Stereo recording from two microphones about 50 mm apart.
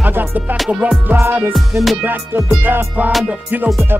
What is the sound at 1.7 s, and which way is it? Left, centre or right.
Music, right.